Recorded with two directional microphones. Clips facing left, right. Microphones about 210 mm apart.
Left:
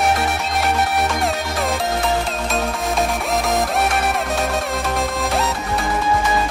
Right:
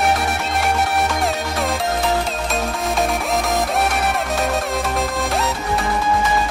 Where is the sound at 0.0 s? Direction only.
Centre (ahead or behind).